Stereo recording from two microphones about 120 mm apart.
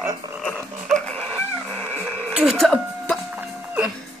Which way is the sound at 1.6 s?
Centre (ahead or behind).